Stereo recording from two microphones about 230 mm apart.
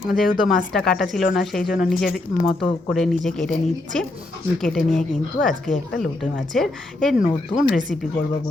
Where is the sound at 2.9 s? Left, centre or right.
Centre.